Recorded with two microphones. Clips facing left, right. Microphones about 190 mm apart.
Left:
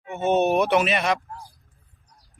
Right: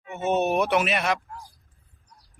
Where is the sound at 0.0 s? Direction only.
30° left (ahead or behind).